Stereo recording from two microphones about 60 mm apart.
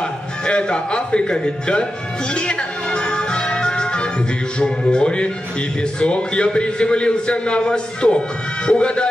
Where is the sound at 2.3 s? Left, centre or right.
Centre.